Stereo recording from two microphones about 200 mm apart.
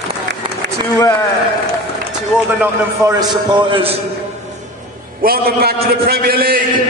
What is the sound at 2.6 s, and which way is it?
A man's voice, 15° right (ahead or behind).